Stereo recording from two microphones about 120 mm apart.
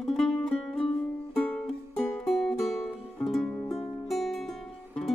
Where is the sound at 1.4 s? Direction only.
15° left (ahead or behind).